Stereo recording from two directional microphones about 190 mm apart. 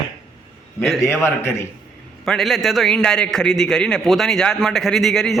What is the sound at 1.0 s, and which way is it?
Speech, 15° left (ahead or behind).